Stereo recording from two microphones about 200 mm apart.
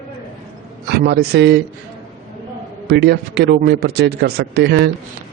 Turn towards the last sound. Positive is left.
turn(degrees=-55)  # may be behind; listen again after turning